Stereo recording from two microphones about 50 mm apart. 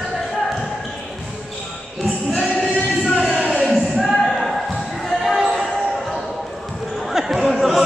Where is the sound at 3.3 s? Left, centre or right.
Right.